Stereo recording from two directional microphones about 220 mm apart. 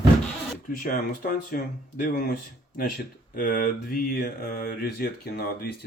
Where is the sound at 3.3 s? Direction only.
40° left (ahead or behind).